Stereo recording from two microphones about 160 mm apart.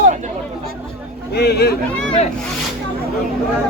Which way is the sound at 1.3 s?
90° left.